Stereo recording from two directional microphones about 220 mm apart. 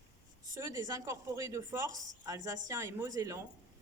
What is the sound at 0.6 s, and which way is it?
Speech, 15° right (ahead or behind).